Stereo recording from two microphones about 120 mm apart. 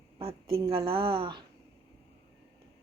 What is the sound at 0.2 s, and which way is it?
A woman's voice, 50° right (ahead or behind).